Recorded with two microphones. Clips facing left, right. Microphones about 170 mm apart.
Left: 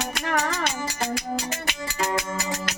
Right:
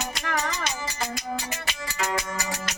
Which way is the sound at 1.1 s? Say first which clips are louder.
Left 3 dB; 60° left (ahead or behind).